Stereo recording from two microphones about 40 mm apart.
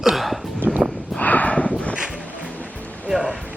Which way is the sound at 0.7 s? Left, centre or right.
Right.